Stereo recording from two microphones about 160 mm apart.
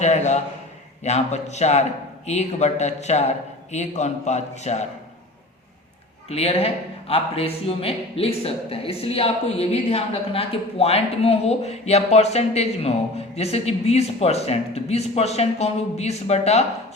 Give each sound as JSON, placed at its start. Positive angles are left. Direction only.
{"t": 0.0, "sound": "a man's voice", "side_deg": 45}
{"t": 6.2, "sound": "speech", "side_deg": 40}